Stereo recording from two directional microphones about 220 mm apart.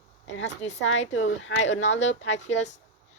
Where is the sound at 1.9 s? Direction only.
30° left (ahead or behind).